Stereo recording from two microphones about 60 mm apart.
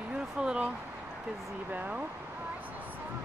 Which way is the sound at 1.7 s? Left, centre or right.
Right.